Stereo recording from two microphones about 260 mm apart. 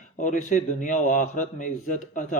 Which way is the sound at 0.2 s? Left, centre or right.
Left.